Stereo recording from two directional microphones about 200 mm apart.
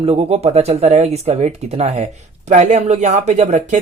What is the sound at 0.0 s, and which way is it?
Speech, 30° right (ahead or behind).